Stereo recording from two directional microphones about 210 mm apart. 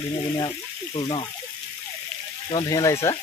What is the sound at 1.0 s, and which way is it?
Speech, 20° left (ahead or behind).